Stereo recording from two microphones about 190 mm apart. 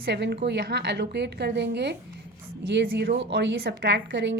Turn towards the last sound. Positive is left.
turn(degrees=-65)  # may be behind; listen again after turning